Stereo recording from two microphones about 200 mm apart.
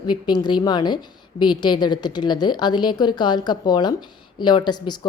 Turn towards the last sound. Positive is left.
turn(degrees=20)  # may be behind; listen again after turning